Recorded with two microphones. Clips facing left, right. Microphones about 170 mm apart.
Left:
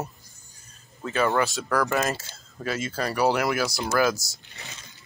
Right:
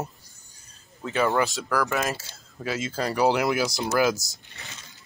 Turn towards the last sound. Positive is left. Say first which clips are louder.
# even
turn(degrees=-20)  # may be behind; listen again after turning